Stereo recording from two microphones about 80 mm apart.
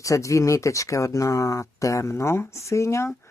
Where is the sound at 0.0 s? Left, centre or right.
Left.